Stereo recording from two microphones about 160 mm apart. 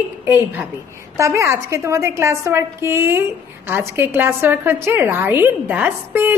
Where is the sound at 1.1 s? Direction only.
20° right (ahead or behind).